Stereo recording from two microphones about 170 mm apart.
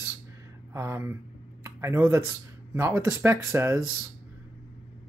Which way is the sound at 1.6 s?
15° right (ahead or behind).